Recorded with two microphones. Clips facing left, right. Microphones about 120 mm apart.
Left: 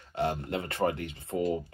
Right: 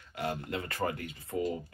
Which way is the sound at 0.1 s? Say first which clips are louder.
Left 5 dB; 30° left (ahead or behind).